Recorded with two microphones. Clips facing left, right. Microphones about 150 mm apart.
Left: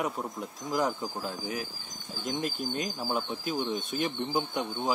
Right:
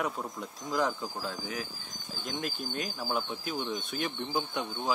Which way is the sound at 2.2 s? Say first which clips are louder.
Left 4 dB; 40° left (ahead or behind).